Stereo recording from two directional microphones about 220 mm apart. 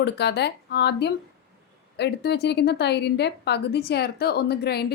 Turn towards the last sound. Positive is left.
turn(degrees=45)  # may be behind; listen again after turning